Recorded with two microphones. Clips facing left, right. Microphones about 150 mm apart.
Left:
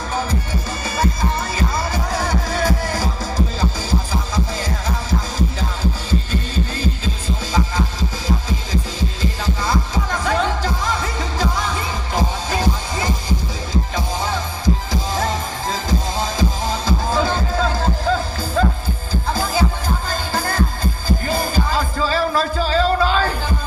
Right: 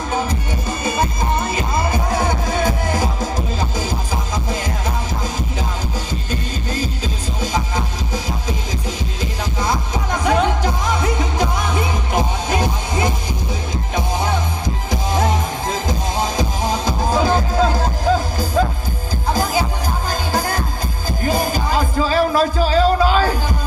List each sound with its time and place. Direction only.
0.1 s music: 20° right (ahead or behind)
8.4 s music: 20° right (ahead or behind)